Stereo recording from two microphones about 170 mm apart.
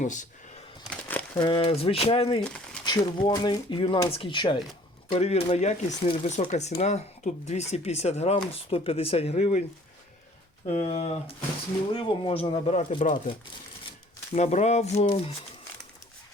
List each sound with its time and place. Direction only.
0.0 s a sound: 45° left (ahead or behind)
0.9 s crumpling: 10° left (ahead or behind)
1.4 s speech: 30° left (ahead or behind)
2.4 s crumpling: 5° left (ahead or behind)
2.8 s speech: 25° left (ahead or behind)
5.1 s speech: 40° left (ahead or behind)
10.7 s speech: 40° left (ahead or behind)
14.3 s speech: 40° left (ahead or behind)